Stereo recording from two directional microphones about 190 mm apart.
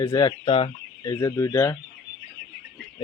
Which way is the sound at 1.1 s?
15° left (ahead or behind).